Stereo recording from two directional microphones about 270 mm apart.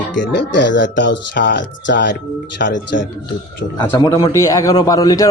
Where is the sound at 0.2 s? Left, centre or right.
Left.